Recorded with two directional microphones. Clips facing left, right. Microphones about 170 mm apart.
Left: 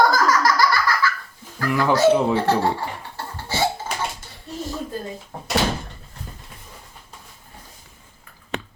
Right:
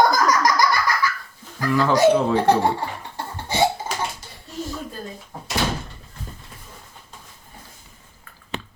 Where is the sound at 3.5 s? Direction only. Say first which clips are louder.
Right 3 dB; 20° right (ahead or behind).